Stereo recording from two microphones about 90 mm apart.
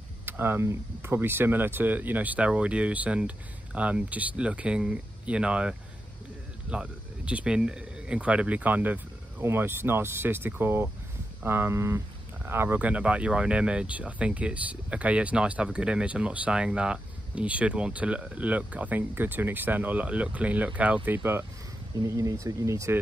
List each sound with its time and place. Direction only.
0.2 s speech: 25° right (ahead or behind)
22.0 s speech: 40° right (ahead or behind)